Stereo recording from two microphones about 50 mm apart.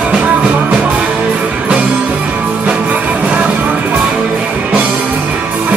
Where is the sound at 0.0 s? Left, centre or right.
Right.